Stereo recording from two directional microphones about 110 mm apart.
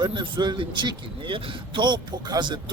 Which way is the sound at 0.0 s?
45° right (ahead or behind).